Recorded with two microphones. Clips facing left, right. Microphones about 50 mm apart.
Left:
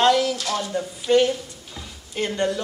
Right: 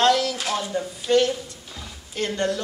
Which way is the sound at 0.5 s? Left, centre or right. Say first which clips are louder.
Left 1 dB; centre.